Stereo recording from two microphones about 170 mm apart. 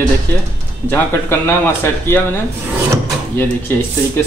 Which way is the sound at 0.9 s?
15° left (ahead or behind).